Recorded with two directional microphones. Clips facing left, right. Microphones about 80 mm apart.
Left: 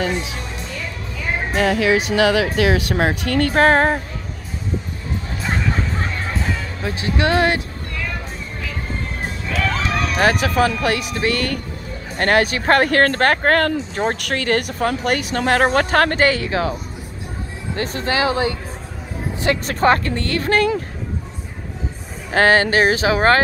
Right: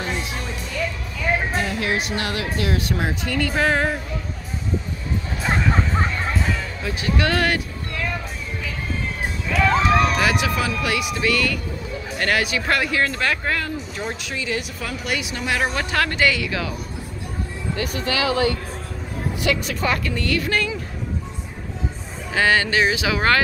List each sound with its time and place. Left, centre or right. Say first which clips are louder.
1.5 s music: left 7 dB; left
2.5 s speech: left 6 dB; left
6.8 s speech: left 3 dB; left
9.5 s a sound: right 4 dB; centre
10.1 s a woman's voice: left 4 dB; left
13.7 s speech: left 8 dB; left
14.1 s a woman's voice: left 7 dB; left
17.7 s speech: left 4 dB; left
19.4 s speech: left 6 dB; left
22.3 s speech: left 4 dB; left